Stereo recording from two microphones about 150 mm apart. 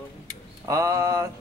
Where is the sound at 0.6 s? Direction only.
20° right (ahead or behind).